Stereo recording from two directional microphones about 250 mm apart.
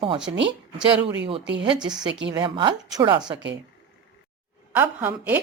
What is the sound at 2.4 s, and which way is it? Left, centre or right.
Speech, centre.